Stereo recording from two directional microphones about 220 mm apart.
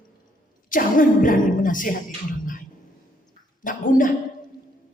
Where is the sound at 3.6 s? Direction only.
40° left (ahead or behind).